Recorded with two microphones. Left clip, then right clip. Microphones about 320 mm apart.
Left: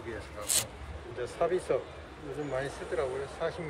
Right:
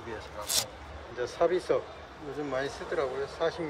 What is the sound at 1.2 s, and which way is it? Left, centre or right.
Speech, right.